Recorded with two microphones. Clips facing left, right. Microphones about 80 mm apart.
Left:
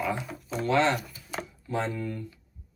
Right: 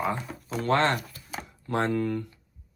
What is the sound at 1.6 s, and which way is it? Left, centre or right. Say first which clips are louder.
Speech: right 5 dB; right.